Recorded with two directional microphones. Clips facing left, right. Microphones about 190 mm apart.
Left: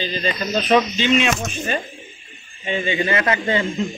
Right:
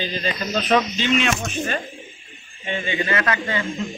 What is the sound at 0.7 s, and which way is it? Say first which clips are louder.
Speech: left 3 dB; 5° left (ahead or behind).